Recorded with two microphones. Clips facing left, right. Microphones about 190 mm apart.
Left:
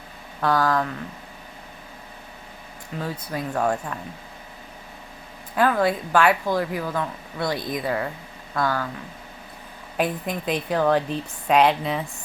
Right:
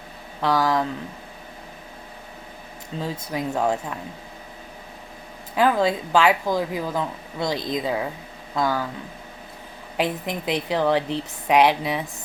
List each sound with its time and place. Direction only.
0.4 s a woman's voice: 10° right (ahead or behind)
3.0 s speech: 20° right (ahead or behind)
5.5 s a woman's voice: 15° right (ahead or behind)
10.2 s a woman's voice: 15° right (ahead or behind)